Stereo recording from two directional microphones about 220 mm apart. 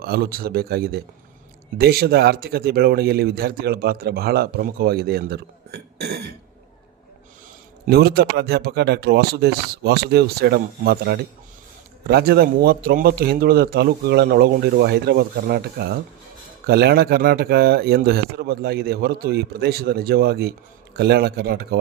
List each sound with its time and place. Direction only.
0.0 s speech: 45° right (ahead or behind)
7.9 s speech: 45° right (ahead or behind)